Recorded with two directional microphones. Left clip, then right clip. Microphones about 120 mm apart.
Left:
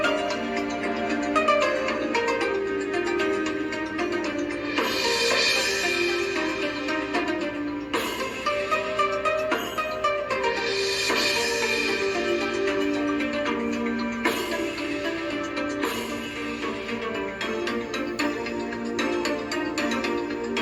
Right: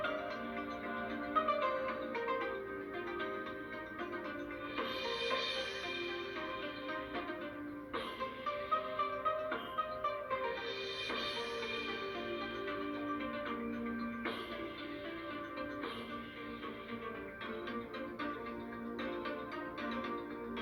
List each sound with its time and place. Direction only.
1.1 s music: 25° left (ahead or behind)
4.8 s music: 25° left (ahead or behind)
8.4 s music: 25° left (ahead or behind)